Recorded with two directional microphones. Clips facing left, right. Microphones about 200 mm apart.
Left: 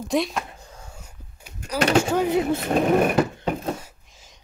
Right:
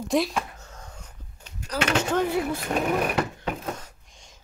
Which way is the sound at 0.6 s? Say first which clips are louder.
Left 1 dB; 10° left (ahead or behind).